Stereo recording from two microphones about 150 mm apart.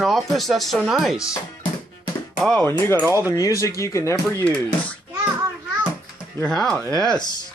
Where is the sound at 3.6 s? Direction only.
20° left (ahead or behind).